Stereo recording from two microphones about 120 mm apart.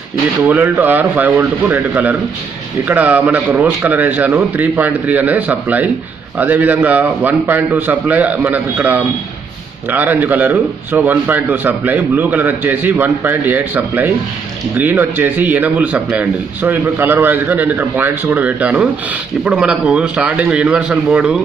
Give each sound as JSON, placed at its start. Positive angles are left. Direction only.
{"t": 0.5, "sound": "a man's voice", "side_deg": -15}